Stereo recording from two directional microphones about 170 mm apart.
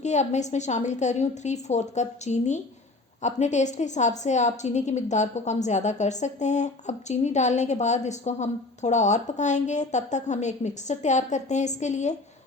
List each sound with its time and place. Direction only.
0.0 s a woman's voice: 45° left (ahead or behind)